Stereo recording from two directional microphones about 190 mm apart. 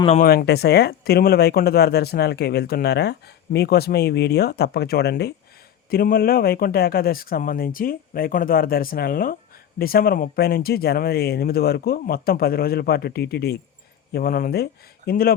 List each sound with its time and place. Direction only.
0.2 s speech: 55° left (ahead or behind)